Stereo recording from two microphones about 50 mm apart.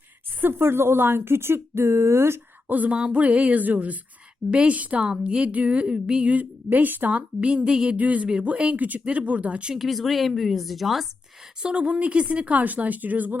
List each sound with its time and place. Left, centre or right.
0.4 s speech: right
2.6 s speech: right
4.5 s speech: centre
6.7 s speech: right; by 7.9 s centre
7.9 s speech: right
9.7 s speech: centre
11.6 s speech: right